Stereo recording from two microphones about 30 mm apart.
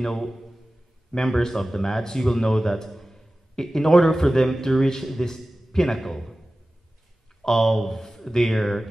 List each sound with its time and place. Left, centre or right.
0.0 s a man's voice: centre
7.4 s a man's voice: centre